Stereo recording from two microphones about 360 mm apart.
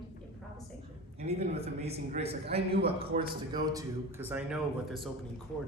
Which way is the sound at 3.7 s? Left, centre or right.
Centre.